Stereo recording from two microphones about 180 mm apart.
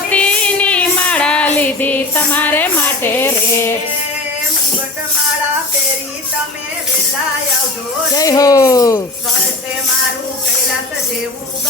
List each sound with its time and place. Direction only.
0.1 s female singing: 5° left (ahead or behind)
8.1 s speech: 20° left (ahead or behind)